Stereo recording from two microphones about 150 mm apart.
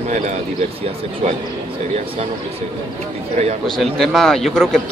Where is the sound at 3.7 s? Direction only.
Centre (ahead or behind).